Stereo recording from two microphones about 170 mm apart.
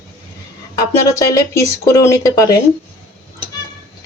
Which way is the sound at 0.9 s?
20° left (ahead or behind).